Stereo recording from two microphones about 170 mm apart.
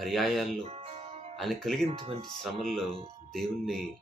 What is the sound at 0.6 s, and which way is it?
Music, 35° right (ahead or behind).